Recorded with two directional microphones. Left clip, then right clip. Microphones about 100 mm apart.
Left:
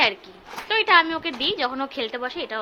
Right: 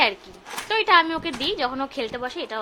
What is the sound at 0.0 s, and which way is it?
A woman's voice, 25° right (ahead or behind).